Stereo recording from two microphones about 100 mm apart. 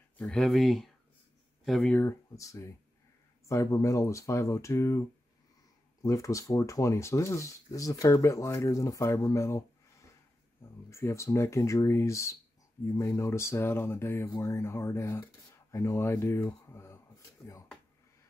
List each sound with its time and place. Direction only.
0.2 s speech: 5° left (ahead or behind)
1.9 s speech: 20° left (ahead or behind)
2.3 s speech: 30° left (ahead or behind)
6.0 s speech: 35° left (ahead or behind)
10.9 s speech: 30° left (ahead or behind)